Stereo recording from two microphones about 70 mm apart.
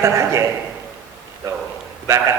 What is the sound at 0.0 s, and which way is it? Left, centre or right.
Speech, right.